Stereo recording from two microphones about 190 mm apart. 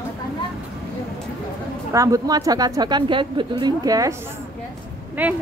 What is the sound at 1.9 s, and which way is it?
A woman's voice, 15° right (ahead or behind).